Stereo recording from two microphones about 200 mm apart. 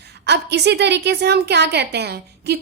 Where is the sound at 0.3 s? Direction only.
55° right (ahead or behind).